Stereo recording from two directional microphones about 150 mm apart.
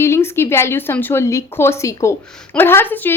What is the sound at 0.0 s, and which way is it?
A woman's voice, 15° left (ahead or behind).